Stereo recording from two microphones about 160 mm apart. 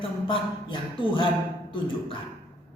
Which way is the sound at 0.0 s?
35° left (ahead or behind).